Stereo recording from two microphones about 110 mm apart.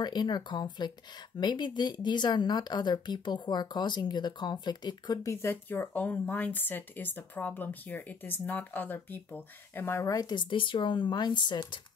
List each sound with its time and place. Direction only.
0.0 s speech: 40° left (ahead or behind); by 10.1 s 20° left (ahead or behind)
10.1 s speech: 40° left (ahead or behind)